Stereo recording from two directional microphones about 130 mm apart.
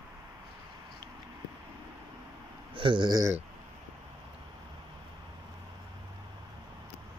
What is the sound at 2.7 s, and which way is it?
Speech, 40° right (ahead or behind).